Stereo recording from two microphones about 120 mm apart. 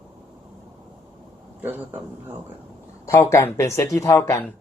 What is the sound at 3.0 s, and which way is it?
Speech, 25° left (ahead or behind).